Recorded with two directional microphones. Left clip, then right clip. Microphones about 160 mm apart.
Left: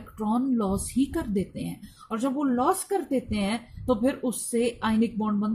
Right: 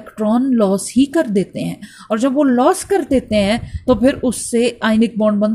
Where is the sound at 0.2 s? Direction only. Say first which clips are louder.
Right 12 dB; 30° right (ahead or behind).